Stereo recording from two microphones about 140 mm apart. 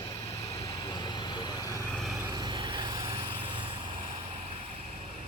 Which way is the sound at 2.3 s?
35° right (ahead or behind).